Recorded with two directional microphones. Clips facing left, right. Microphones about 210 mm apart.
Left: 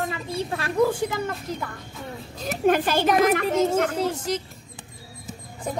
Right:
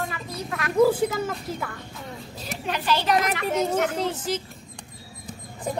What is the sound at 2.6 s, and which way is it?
Speech, 50° left (ahead or behind).